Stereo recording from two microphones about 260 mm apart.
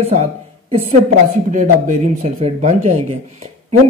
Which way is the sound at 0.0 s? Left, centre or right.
Right.